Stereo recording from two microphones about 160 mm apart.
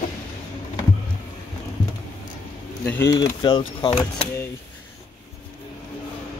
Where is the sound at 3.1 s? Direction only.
30° left (ahead or behind).